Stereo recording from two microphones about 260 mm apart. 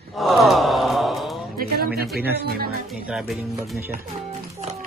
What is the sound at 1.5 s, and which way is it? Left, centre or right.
Music, right.